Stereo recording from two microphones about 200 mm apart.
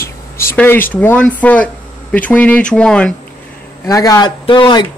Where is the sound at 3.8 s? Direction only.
15° left (ahead or behind).